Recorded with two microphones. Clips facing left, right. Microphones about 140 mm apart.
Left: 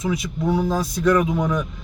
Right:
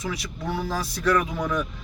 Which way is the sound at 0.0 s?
20° left (ahead or behind).